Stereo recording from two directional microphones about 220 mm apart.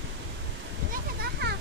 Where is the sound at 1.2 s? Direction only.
50° right (ahead or behind).